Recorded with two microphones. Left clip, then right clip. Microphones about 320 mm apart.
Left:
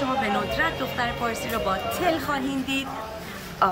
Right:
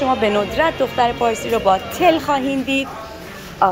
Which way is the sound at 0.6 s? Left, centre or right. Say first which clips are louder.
Right 9 dB; centre.